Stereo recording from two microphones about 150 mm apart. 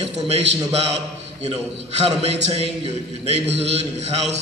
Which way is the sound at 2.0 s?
40° right (ahead or behind).